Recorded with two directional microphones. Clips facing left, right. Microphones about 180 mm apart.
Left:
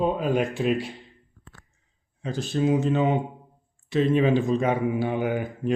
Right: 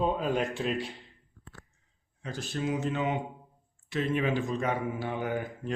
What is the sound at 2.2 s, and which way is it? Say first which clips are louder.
Speech: left 9 dB; 25° left (ahead or behind).